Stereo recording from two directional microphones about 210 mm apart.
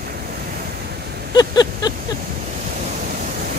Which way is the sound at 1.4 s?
20° left (ahead or behind).